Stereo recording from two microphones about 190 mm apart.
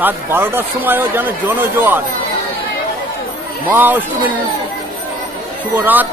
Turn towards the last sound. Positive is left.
turn(degrees=-10)  # may be behind; listen again after turning